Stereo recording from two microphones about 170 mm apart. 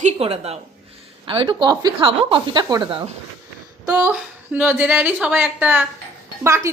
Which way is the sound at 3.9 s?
5° right (ahead or behind).